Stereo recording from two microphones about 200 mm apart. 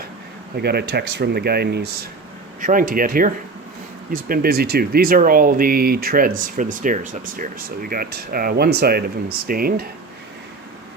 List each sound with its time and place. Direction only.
0.5 s speech: 55° right (ahead or behind)
2.6 s speech: 40° right (ahead or behind)